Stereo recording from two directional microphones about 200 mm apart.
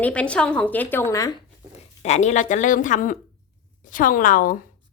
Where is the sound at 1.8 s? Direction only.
35° left (ahead or behind).